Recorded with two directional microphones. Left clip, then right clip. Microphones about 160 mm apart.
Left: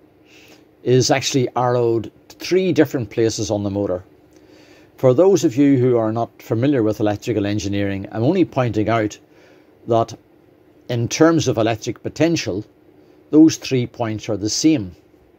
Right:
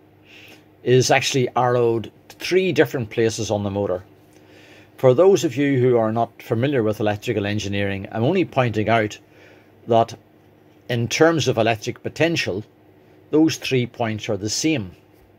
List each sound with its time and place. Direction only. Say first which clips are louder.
0.4 s speech: left 2 dB; 25° left (ahead or behind)